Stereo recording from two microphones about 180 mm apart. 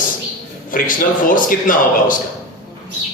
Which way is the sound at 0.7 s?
50° left (ahead or behind).